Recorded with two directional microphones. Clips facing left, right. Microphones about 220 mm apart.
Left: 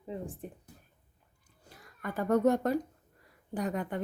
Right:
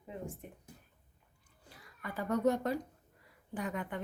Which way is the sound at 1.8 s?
50° left (ahead or behind).